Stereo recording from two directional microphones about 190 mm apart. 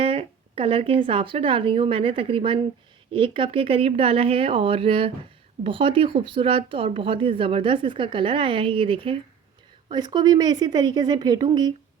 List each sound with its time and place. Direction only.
0.0 s speech: 30° right (ahead or behind)